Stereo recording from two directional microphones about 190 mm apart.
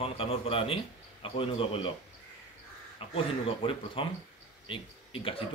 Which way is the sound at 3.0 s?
30° left (ahead or behind).